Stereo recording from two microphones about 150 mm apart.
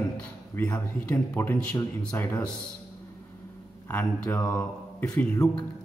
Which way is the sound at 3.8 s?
15° left (ahead or behind).